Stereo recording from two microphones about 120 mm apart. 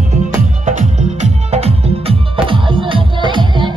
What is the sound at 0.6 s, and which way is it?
Music, 75° right (ahead or behind).